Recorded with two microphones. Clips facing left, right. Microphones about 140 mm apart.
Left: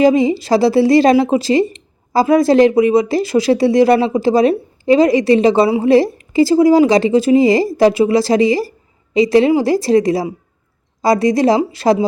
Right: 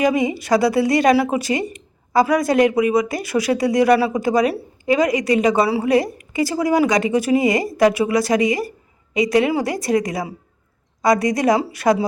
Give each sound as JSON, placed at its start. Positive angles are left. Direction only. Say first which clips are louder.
{"t": 0.0, "sound": "speech", "louder": "left 6 dB", "side_deg": 25}